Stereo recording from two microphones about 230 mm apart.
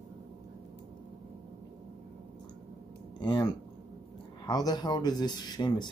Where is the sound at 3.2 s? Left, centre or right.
Centre.